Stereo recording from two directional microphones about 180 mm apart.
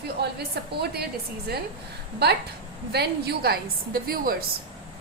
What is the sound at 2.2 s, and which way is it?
A woman's voice, 65° right (ahead or behind).